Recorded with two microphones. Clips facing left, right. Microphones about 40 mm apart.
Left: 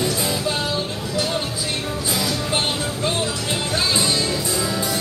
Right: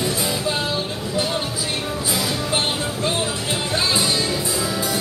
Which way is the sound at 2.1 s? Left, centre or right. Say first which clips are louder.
Even; centre.